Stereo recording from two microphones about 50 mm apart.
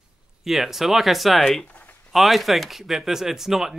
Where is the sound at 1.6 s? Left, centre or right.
Left.